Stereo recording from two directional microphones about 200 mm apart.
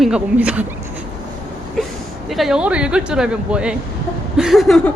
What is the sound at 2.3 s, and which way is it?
A woman's voice, centre (ahead or behind).